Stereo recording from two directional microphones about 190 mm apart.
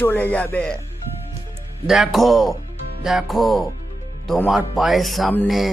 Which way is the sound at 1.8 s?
Centre (ahead or behind).